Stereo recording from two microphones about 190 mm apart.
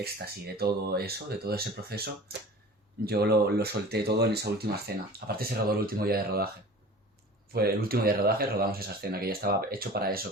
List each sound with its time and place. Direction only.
0.0 s speech: 55° right (ahead or behind)
7.5 s speech: 55° right (ahead or behind)